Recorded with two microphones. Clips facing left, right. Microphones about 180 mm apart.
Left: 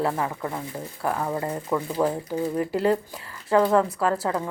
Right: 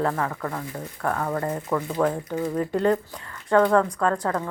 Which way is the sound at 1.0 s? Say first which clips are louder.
Right 1 dB; 10° left (ahead or behind).